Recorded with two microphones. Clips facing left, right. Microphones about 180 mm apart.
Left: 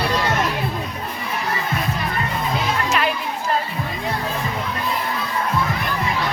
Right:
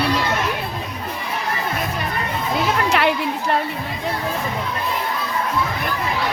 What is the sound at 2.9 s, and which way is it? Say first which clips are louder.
Chatter: right 3 dB; 70° right (ahead or behind).